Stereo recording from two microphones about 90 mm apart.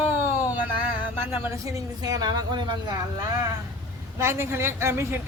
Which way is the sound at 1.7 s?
45° right (ahead or behind).